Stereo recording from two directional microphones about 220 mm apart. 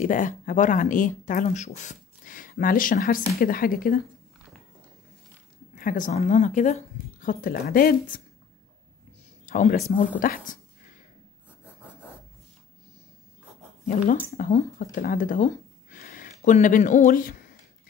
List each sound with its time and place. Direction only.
0.0 s speech: 35° left (ahead or behind)
5.8 s speech: 40° left (ahead or behind)
9.5 s speech: 35° left (ahead or behind)
14.3 s speech: 30° left (ahead or behind)